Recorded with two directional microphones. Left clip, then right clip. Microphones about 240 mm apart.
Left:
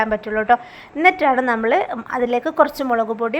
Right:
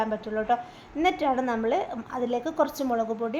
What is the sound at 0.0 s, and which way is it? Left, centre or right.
A woman's voice, centre.